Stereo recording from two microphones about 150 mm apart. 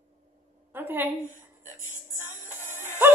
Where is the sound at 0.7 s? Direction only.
15° right (ahead or behind).